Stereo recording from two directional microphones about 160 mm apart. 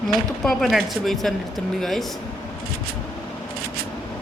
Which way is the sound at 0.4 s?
Centre (ahead or behind).